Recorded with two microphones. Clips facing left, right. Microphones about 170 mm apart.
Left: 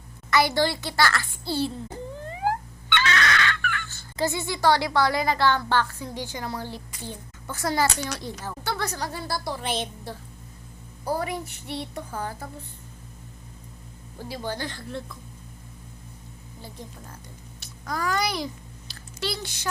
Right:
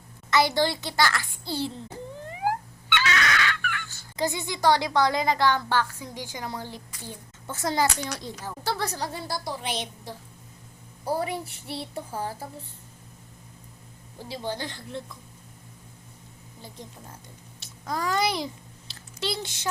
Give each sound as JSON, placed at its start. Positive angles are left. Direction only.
{"t": 0.3, "sound": "a child's voice", "side_deg": -20}
{"t": 2.3, "sound": "a sound", "side_deg": -15}
{"t": 6.9, "sound": "a child's voice", "side_deg": 20}
{"t": 7.4, "sound": "a child's voice", "side_deg": -20}
{"t": 8.6, "sound": "a woman's voice", "side_deg": -30}
{"t": 9.6, "sound": "a woman's voice", "side_deg": 50}
{"t": 11.0, "sound": "a child's voice", "side_deg": -30}
{"t": 14.3, "sound": "a child's voice", "side_deg": -20}
{"t": 16.6, "sound": "a child's voice", "side_deg": -20}
{"t": 17.6, "sound": "a sound", "side_deg": -25}